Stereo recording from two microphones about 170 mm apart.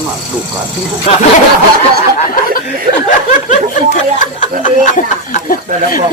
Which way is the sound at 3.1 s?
50° left (ahead or behind).